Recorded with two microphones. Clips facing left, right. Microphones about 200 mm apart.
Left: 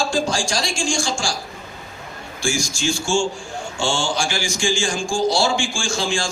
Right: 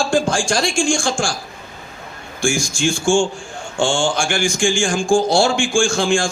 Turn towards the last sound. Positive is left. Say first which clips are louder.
# right 7 dB
turn(degrees=-55)  # may be behind; listen again after turning